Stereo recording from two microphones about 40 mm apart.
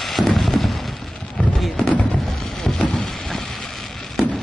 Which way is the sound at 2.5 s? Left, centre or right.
Centre.